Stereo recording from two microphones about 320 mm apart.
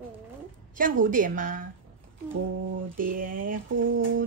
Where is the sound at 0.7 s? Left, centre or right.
Right.